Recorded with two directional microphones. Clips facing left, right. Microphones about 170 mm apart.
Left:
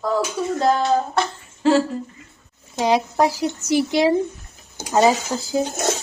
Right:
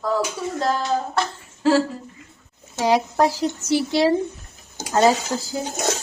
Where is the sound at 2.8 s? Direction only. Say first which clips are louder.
Even; 15° left (ahead or behind).